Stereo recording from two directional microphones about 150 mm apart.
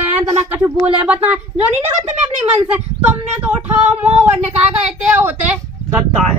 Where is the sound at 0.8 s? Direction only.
10° right (ahead or behind).